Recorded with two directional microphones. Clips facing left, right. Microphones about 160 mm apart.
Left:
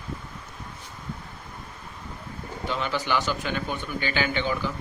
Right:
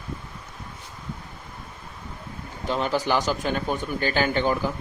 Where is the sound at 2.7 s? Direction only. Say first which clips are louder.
Right 4 dB; 40° right (ahead or behind).